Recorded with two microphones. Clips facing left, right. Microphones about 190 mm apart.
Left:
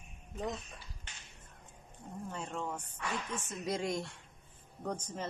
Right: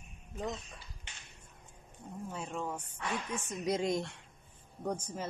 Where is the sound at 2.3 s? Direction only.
5° right (ahead or behind).